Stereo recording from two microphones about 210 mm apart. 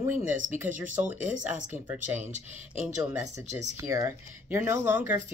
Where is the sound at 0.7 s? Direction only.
35° right (ahead or behind).